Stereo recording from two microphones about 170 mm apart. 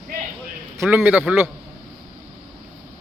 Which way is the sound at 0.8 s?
10° right (ahead or behind).